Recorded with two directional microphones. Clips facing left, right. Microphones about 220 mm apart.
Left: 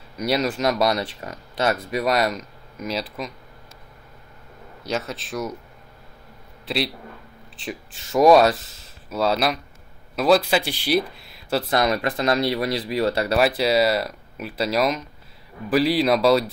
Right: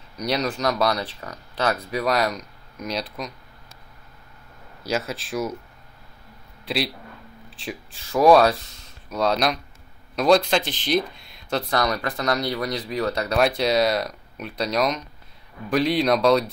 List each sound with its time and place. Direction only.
0.2 s speech: 5° left (ahead or behind)
0.8 s speech: 25° left (ahead or behind)
1.9 s speech: centre (ahead or behind)
4.8 s speech: centre (ahead or behind)
6.6 s a man's voice: centre (ahead or behind)
11.7 s speech: 25° left (ahead or behind)
13.3 s speech: 5° left (ahead or behind)